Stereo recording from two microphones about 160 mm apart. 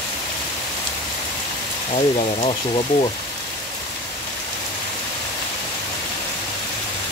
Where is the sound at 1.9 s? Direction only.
45° left (ahead or behind).